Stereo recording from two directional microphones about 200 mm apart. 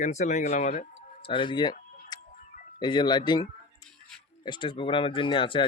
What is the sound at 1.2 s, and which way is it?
Speech, 25° left (ahead or behind).